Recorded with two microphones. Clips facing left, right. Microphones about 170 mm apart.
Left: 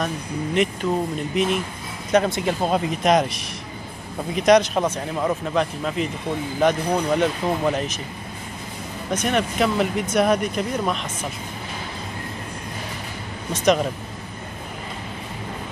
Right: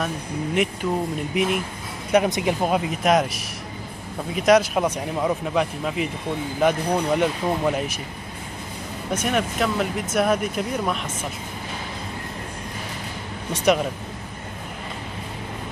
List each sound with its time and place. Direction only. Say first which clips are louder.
0.8 s speech: left 1 dB; 10° right (ahead or behind)
4.4 s speech: left 1 dB; 5° right (ahead or behind)
9.1 s speech: left 1 dB; 5° right (ahead or behind)